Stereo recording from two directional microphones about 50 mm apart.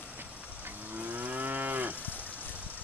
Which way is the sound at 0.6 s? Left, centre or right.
Right.